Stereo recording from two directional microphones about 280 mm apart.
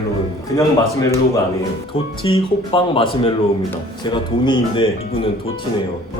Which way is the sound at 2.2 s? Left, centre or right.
Centre.